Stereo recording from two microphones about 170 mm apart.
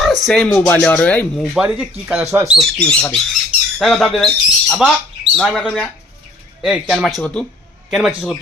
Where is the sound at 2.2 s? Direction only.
20° right (ahead or behind).